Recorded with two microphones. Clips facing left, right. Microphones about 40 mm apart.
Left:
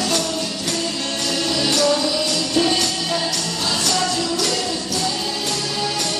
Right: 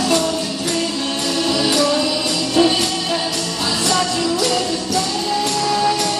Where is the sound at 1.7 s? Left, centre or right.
Centre.